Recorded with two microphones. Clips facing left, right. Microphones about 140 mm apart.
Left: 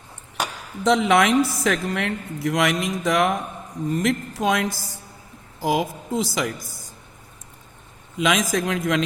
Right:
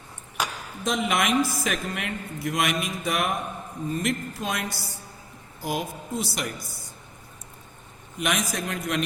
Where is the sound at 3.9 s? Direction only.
75° left (ahead or behind); by 6.9 s 90° left.